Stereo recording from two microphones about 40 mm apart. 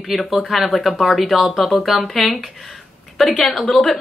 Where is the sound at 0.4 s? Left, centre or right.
Centre.